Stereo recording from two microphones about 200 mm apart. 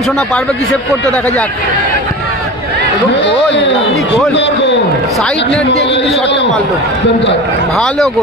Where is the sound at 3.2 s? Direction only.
60° left (ahead or behind).